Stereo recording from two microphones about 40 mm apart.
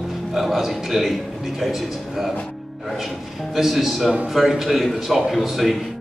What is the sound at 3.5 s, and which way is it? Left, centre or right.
A man's voice, centre.